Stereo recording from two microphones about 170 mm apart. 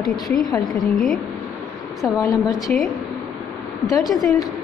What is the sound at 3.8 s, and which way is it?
Speech, 20° left (ahead or behind).